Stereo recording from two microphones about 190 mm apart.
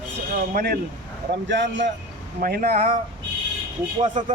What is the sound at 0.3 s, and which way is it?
Speech, 55° right (ahead or behind).